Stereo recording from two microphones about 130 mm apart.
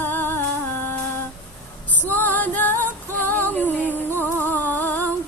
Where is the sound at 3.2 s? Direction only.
15° left (ahead or behind).